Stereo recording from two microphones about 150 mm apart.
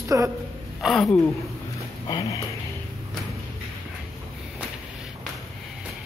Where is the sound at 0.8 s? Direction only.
Centre (ahead or behind).